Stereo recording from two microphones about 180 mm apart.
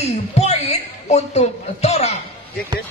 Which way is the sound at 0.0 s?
35° left (ahead or behind).